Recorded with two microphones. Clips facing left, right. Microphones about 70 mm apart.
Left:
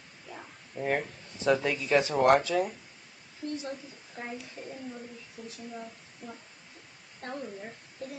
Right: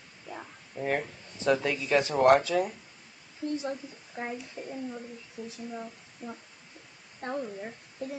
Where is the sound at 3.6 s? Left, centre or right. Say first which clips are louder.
Right 4 dB; right.